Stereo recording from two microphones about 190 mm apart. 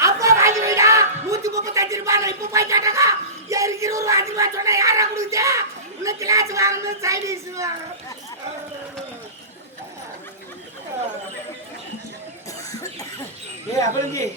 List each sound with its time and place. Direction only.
0.0 s music: 15° right (ahead or behind)
3.5 s a sound: 15° right (ahead or behind)
13.7 s speech: 15° left (ahead or behind)